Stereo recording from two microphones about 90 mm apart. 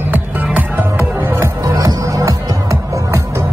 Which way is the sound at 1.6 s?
40° right (ahead or behind).